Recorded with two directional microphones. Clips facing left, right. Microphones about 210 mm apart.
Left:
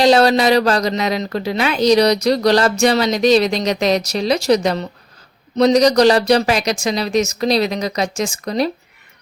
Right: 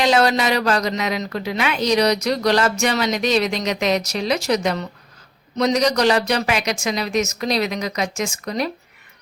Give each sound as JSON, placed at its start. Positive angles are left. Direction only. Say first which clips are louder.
{"t": 0.0, "sound": "a woman's voice", "louder": "left 5 dB", "side_deg": 35}